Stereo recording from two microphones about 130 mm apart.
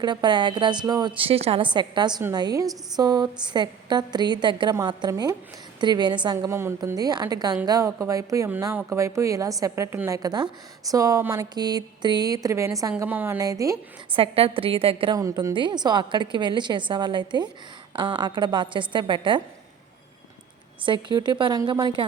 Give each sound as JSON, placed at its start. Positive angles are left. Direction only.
{"t": 0.0, "sound": "a woman's voice", "side_deg": -35}
{"t": 1.1, "sound": "a woman's voice", "side_deg": -45}
{"t": 10.2, "sound": "a woman's voice", "side_deg": -30}
{"t": 13.4, "sound": "speech", "side_deg": -25}
{"t": 14.1, "sound": "a woman's voice", "side_deg": -45}
{"t": 15.1, "sound": "a woman's voice", "side_deg": -25}
{"t": 20.8, "sound": "a woman's voice", "side_deg": -40}